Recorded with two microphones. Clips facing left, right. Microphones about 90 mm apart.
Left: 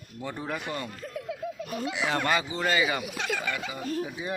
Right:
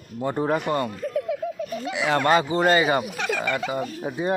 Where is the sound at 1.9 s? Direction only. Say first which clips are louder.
Right 6 dB; 80° right.